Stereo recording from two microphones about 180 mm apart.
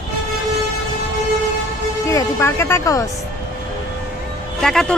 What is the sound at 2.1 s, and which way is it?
Speech, 15° left (ahead or behind).